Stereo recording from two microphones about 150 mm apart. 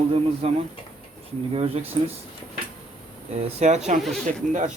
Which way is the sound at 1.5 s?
40° right (ahead or behind).